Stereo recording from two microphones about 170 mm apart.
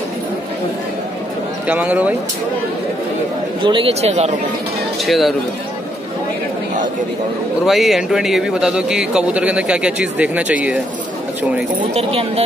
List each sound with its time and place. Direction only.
1.7 s speech: 10° right (ahead or behind)
3.6 s speech: 30° right (ahead or behind)
5.0 s speech: centre (ahead or behind)
7.6 s speech: centre (ahead or behind)
11.9 s speech: 35° right (ahead or behind)